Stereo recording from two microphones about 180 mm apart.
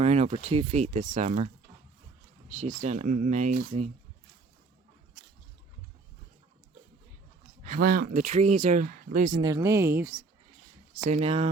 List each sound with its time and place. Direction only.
0.0 s speech: 35° right (ahead or behind)
2.5 s speech: 40° right (ahead or behind)
7.6 s speech: 50° right (ahead or behind)
9.4 s speech: 20° right (ahead or behind)
11.0 s speech: 35° right (ahead or behind)